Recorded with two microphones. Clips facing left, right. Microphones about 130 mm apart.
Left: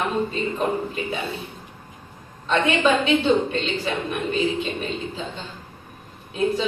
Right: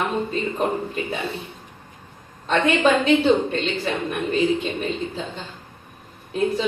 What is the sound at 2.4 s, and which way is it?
A woman's voice, 40° right (ahead or behind).